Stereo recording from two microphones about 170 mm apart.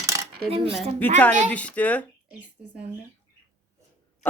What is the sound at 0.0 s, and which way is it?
Cutlery, 20° right (ahead or behind).